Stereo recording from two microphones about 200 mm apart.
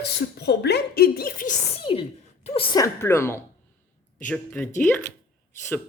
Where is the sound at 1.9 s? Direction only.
25° left (ahead or behind); by 5.1 s 10° left (ahead or behind).